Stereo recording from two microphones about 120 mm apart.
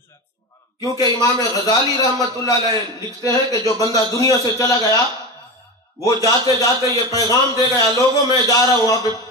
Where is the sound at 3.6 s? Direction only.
30° left (ahead or behind).